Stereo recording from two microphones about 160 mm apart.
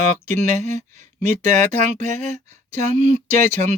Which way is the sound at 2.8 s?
45° right (ahead or behind).